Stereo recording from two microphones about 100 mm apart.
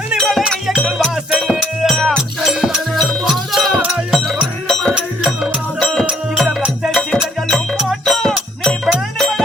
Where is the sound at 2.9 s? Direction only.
5° left (ahead or behind).